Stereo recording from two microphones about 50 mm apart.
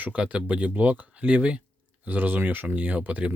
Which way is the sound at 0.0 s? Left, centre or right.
Right.